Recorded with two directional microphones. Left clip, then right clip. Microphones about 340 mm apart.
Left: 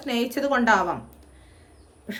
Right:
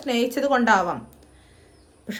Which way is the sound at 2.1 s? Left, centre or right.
Centre.